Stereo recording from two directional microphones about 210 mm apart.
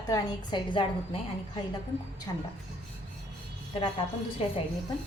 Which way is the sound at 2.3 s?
15° left (ahead or behind).